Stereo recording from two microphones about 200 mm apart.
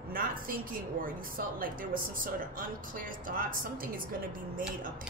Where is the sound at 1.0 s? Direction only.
45° right (ahead or behind).